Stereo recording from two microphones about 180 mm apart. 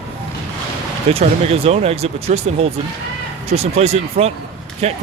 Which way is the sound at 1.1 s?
35° right (ahead or behind).